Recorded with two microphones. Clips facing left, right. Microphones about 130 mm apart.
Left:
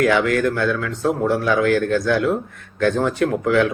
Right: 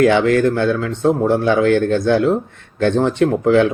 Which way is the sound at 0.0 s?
25° right (ahead or behind).